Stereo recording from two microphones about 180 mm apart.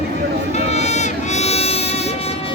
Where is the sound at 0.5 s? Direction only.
40° left (ahead or behind).